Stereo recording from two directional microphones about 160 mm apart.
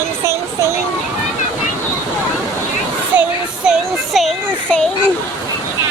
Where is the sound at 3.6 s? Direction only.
Centre (ahead or behind).